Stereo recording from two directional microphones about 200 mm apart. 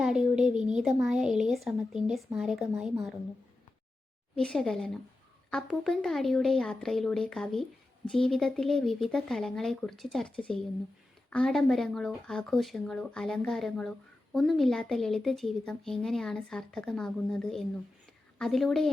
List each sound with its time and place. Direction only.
0.0 s a child's voice: 5° right (ahead or behind)
4.4 s speech: 5° left (ahead or behind)